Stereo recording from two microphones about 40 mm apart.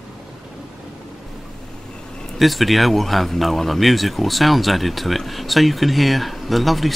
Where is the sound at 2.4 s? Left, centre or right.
Centre.